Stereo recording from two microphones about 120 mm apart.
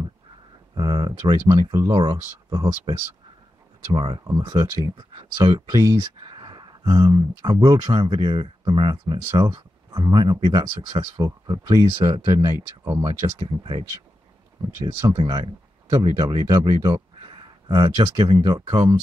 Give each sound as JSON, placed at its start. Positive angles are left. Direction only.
{"t": 0.7, "sound": "speech", "side_deg": -40}
{"t": 3.9, "sound": "speech", "side_deg": -40}
{"t": 5.9, "sound": "speech", "side_deg": -40}
{"t": 14.9, "sound": "speech", "side_deg": -45}